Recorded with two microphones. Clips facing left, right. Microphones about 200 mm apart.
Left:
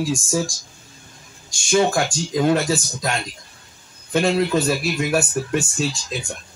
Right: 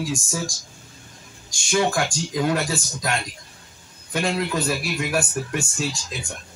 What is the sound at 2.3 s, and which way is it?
Speech, 25° left (ahead or behind).